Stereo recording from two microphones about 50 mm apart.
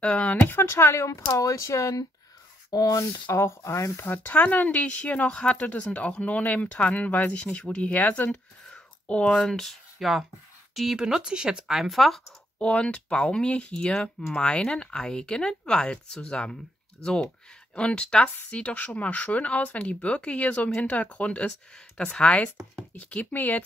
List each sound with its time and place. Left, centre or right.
0.0 s speech: left
0.7 s speech: left
3.3 s speech: left
4.0 s speech: left
9.0 s speech: centre
10.7 s speech: centre
12.5 s speech: left
21.5 s speech: centre; by 23.6 s left